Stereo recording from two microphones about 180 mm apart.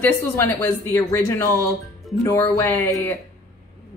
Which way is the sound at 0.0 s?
15° left (ahead or behind).